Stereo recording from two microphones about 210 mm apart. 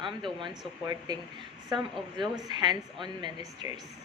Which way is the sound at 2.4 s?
20° right (ahead or behind).